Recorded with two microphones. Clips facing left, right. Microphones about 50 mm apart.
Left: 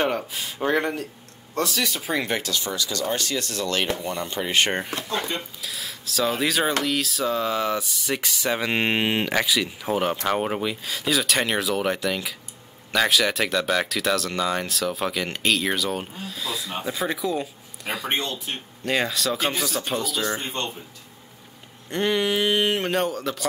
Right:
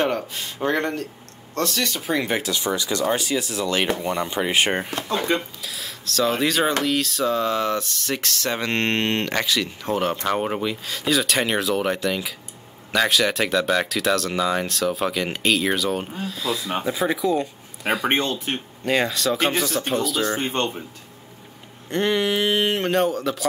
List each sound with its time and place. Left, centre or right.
0.0 s speech: centre
2.5 s speech: right
3.1 s speech: centre
18.0 s speech: right
18.9 s speech: centre
20.3 s speech: right
21.8 s speech: centre